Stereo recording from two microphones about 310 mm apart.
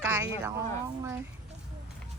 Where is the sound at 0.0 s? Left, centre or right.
Centre.